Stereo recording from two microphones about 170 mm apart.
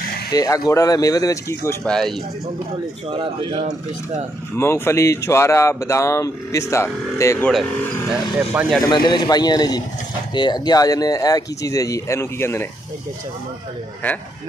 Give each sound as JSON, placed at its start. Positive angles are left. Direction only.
{"t": 0.3, "sound": "speech", "side_deg": 20}
{"t": 1.9, "sound": "speech", "side_deg": 0}
{"t": 3.1, "sound": "speech", "side_deg": -30}
{"t": 4.6, "sound": "speech", "side_deg": 15}
{"t": 8.1, "sound": "speech", "side_deg": -5}
{"t": 8.8, "sound": "speech", "side_deg": 25}
{"t": 14.0, "sound": "speech", "side_deg": 10}